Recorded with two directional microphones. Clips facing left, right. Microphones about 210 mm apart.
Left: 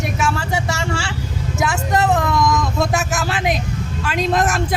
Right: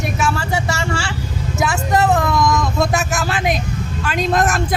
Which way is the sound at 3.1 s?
20° left (ahead or behind).